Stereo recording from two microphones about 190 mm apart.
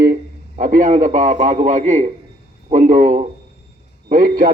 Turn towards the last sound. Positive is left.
turn(degrees=-45)  # may be behind; listen again after turning